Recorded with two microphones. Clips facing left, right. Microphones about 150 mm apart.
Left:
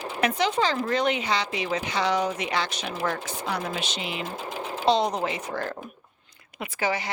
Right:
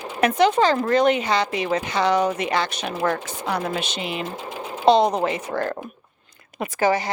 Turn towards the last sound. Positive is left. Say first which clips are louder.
# right 7 dB
turn(degrees=-45)  # may be behind; listen again after turning